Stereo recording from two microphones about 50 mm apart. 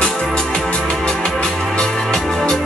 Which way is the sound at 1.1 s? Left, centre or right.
Centre.